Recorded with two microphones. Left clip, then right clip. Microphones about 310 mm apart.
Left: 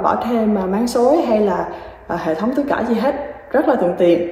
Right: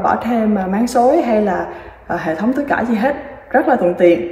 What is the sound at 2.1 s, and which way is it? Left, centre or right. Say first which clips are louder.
A woman's voice: right 1 dB; centre.